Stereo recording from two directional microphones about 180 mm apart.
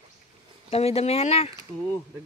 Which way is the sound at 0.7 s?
35° left (ahead or behind).